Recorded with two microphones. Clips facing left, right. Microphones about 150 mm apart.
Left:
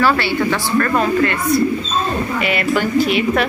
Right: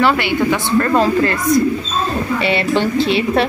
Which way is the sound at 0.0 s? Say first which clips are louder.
Right 1 dB; 20° right (ahead or behind).